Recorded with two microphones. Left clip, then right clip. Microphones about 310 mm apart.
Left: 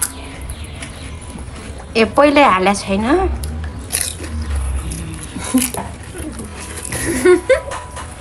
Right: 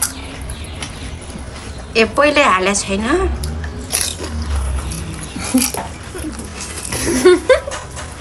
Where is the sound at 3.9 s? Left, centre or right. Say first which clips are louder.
Right 3 dB; centre.